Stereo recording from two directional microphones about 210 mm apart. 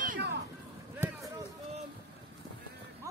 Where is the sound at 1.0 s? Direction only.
10° right (ahead or behind).